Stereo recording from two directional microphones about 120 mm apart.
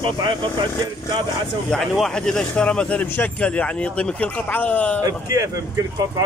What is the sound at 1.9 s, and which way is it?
Speech, 5° left (ahead or behind).